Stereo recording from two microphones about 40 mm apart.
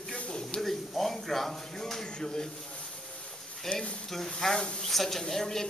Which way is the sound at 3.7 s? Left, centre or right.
Left.